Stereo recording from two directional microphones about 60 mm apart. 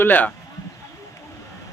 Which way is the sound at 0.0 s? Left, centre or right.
Left.